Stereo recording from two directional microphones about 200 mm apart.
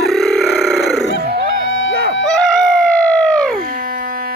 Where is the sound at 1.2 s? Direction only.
50° right (ahead or behind).